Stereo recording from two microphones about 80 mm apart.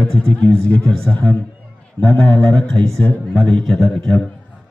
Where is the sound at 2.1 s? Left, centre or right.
Centre.